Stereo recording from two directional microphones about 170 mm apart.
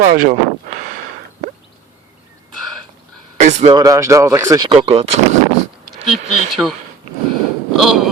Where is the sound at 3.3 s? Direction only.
45° right (ahead or behind).